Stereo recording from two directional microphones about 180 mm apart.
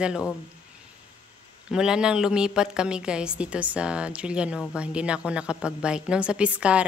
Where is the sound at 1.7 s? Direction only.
5° right (ahead or behind).